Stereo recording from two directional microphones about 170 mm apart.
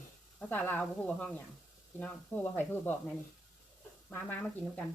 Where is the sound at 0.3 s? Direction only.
10° left (ahead or behind).